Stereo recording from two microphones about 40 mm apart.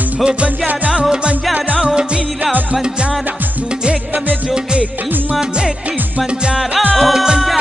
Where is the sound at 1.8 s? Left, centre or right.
Right.